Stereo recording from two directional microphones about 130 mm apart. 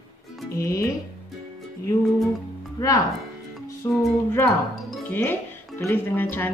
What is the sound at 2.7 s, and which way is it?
Speech, 30° left (ahead or behind).